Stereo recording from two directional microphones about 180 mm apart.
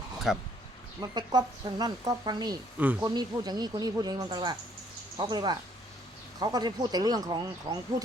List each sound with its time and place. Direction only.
0.3 s speech: centre (ahead or behind)
1.0 s speech: 25° right (ahead or behind)
2.7 s speech: 10° right (ahead or behind)
3.0 s speech: 20° right (ahead or behind)